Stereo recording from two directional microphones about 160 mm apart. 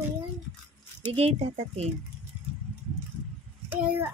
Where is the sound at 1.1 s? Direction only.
40° right (ahead or behind).